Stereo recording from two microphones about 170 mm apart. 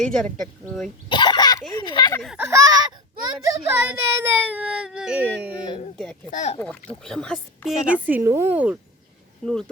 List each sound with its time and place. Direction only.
1.1 s cough: 30° left (ahead or behind)
1.7 s speech: 25° left (ahead or behind)
2.4 s speech: 20° right (ahead or behind)
6.0 s a woman's voice: 5° left (ahead or behind)
6.3 s speech: 45° left (ahead or behind)
7.0 s a woman's voice: 5° left (ahead or behind)
8.0 s speech: 10° right (ahead or behind)
9.4 s a woman's voice: 5° left (ahead or behind)